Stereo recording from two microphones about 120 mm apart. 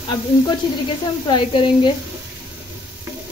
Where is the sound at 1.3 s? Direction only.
40° left (ahead or behind).